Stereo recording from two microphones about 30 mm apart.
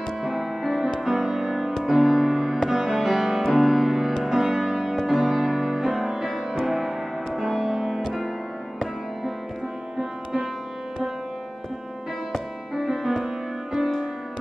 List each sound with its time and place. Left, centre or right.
0.2 s music: centre
9.9 s music: centre
12.7 s music: centre